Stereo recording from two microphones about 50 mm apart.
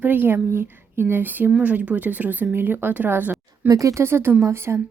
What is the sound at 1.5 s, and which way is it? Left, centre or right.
Speech, right.